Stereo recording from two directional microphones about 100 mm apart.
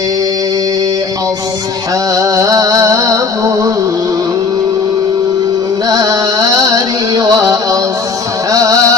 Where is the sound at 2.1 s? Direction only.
35° right (ahead or behind).